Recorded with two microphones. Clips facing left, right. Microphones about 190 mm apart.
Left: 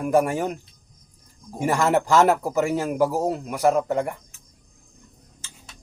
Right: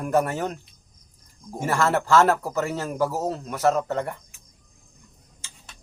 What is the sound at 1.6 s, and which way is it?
Speech, 15° left (ahead or behind).